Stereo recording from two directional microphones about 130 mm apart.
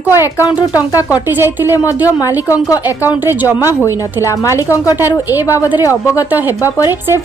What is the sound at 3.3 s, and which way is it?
Speech, 15° right (ahead or behind).